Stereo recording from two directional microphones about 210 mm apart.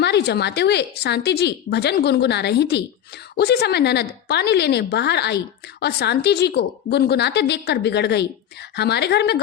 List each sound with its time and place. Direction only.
0.0 s a woman's voice: 50° left (ahead or behind)